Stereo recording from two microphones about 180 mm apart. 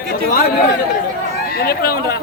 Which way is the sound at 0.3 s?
55° left (ahead or behind).